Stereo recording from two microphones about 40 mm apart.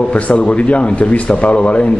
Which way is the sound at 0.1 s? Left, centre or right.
Left.